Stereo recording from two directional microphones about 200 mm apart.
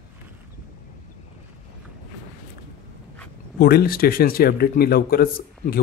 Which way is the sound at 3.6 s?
50° left (ahead or behind).